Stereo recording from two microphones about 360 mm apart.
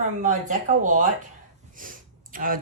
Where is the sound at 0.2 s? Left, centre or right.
Right.